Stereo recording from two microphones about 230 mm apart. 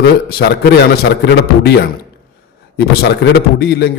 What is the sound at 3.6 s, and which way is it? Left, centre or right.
Speech, left.